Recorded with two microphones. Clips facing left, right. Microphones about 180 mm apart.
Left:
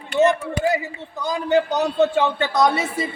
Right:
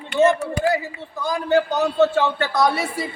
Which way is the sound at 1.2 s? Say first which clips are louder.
Even; 20° left (ahead or behind).